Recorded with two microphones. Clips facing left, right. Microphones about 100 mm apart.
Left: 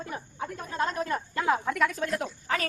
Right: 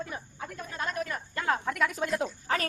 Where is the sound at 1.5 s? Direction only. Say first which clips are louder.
Left 2 dB; centre (ahead or behind).